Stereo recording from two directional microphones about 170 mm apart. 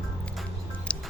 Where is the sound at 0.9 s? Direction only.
5° left (ahead or behind).